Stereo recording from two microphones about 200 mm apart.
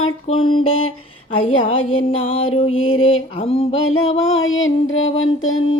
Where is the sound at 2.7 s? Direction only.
90° left.